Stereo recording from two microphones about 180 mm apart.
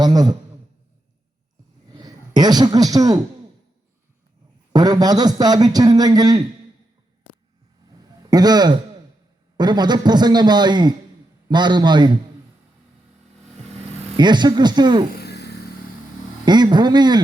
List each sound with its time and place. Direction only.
0.0 s a man's voice: 20° right (ahead or behind)
1.9 s speech: 20° right (ahead or behind)
4.7 s a man's voice: 20° right (ahead or behind)
8.3 s a man's voice: 20° right (ahead or behind)
14.2 s a man's voice: 25° right (ahead or behind)
15.1 s a sound: 65° left (ahead or behind)
16.5 s a man's voice: 25° right (ahead or behind)